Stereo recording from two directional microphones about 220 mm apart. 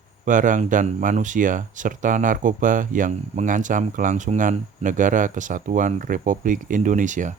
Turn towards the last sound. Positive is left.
turn(degrees=-35)  # may be behind; listen again after turning